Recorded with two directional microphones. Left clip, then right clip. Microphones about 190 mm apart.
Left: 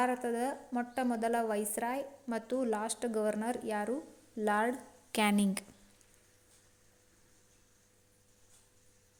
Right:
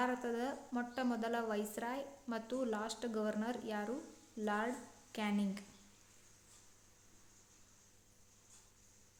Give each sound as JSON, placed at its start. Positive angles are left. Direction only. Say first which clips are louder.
{"t": 0.0, "sound": "a woman's voice", "louder": "left 6 dB", "side_deg": 25}
{"t": 5.1, "sound": "speech", "louder": "left 10 dB", "side_deg": 50}